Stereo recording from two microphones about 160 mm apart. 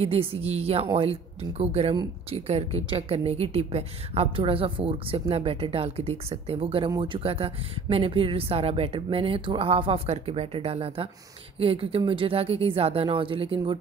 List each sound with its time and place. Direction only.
0.0 s a woman's voice: 35° right (ahead or behind)